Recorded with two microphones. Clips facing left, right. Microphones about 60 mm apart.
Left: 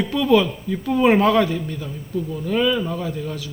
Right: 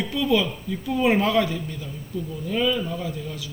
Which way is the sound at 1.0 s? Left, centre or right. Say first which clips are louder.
Left 5 dB; left.